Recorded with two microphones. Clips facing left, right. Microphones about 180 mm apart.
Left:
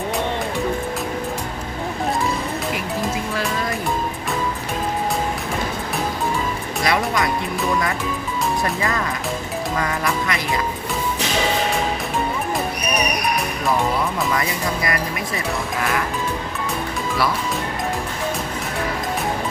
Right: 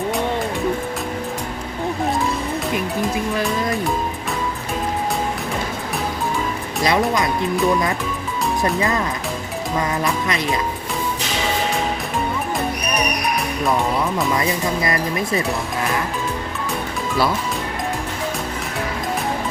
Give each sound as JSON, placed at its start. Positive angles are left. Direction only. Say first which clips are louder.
{"t": 6.8, "sound": "speech", "louder": "right 2 dB", "side_deg": -20}
{"t": 9.7, "sound": "speech", "louder": "right 3 dB", "side_deg": -20}
{"t": 14.3, "sound": "speech", "louder": "right 2 dB", "side_deg": -25}